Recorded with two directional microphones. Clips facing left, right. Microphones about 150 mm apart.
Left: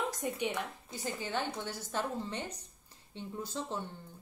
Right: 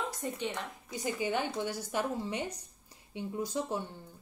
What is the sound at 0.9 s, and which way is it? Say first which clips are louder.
Speech: right 4 dB; 15° right (ahead or behind).